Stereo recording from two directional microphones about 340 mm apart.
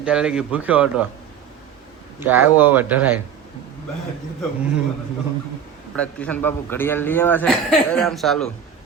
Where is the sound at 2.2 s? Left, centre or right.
Centre.